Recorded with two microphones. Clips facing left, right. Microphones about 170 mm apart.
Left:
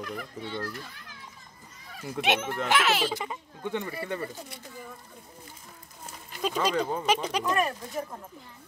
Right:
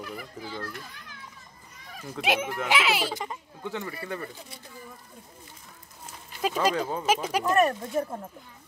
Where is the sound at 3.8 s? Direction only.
25° left (ahead or behind).